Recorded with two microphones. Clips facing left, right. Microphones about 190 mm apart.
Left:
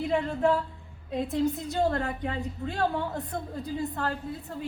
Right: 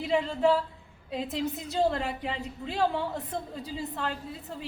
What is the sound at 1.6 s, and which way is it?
Speech, 5° right (ahead or behind).